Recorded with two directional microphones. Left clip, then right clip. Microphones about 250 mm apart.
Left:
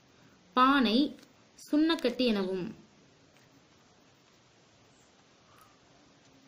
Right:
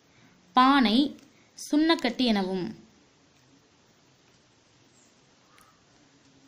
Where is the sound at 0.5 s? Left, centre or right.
Right.